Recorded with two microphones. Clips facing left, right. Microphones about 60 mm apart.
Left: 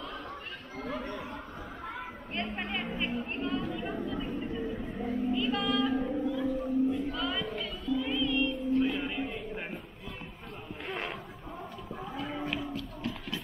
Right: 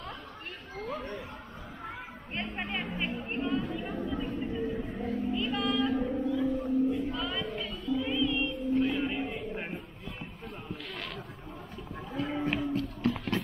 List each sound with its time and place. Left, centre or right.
0.7 s speech: left
2.4 s chatter: centre
4.0 s vehicle: centre
5.3 s music: centre
11.9 s a sound: centre
12.7 s music: right